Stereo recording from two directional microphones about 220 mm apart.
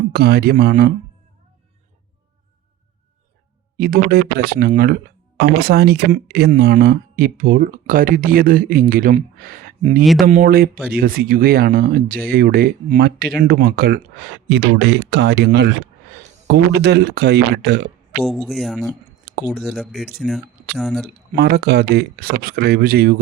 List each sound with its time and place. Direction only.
0.1 s speech: 45° right (ahead or behind)
3.8 s speech: 40° right (ahead or behind)
10.0 s speech: centre (ahead or behind)
10.4 s speech: 45° right (ahead or behind)
18.2 s speech: centre (ahead or behind)
21.3 s speech: 45° right (ahead or behind)